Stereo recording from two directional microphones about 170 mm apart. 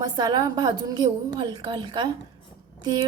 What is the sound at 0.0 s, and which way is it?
A woman's voice, 25° right (ahead or behind).